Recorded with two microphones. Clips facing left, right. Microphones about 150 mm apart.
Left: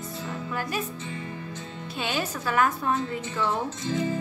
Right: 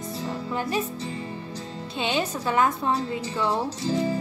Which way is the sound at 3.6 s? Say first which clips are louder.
Right 3 dB; 35° right (ahead or behind).